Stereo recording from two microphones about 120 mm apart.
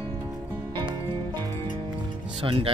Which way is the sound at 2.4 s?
50° right (ahead or behind).